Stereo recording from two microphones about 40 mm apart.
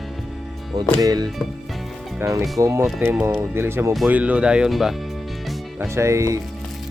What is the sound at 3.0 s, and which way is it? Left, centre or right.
Speech, right.